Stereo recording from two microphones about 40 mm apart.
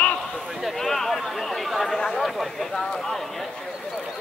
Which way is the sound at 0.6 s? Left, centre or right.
Centre.